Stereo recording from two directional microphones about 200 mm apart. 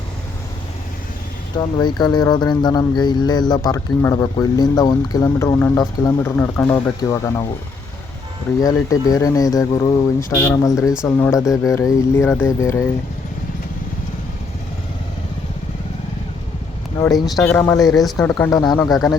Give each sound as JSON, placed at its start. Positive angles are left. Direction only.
{"t": 1.5, "sound": "speech", "side_deg": 20}
{"t": 8.6, "sound": "speech", "side_deg": 15}
{"t": 17.0, "sound": "speech", "side_deg": 20}
{"t": 17.2, "sound": "speech", "side_deg": 0}